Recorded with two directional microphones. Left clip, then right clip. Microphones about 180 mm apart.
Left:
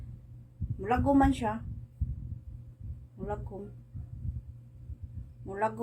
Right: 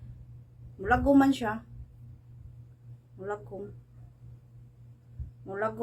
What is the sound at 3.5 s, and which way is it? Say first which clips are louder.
Speech: right 3 dB; centre (ahead or behind).